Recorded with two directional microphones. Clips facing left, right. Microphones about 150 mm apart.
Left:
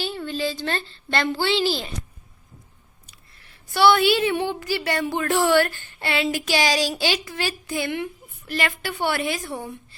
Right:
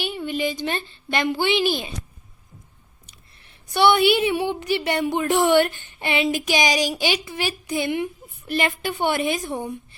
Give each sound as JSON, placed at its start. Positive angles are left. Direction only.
{"t": 0.0, "sound": "a woman's voice", "side_deg": -15}
{"t": 3.1, "sound": "a woman's voice", "side_deg": -20}